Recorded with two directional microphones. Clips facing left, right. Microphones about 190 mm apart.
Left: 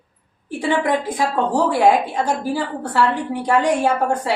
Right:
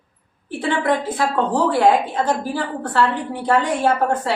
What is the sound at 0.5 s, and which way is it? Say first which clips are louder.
A woman's voice: left 1 dB; 15° left (ahead or behind).